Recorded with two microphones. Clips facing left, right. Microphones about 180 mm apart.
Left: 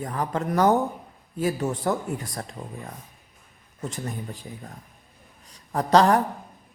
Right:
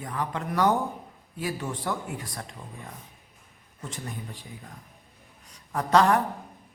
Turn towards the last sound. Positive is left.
turn(degrees=35)  # may be behind; listen again after turning